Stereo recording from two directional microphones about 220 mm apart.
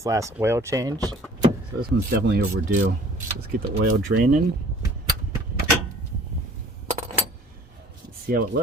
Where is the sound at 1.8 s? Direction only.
45° right (ahead or behind).